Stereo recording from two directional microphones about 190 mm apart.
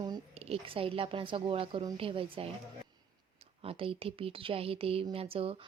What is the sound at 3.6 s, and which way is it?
A woman's voice, 30° right (ahead or behind).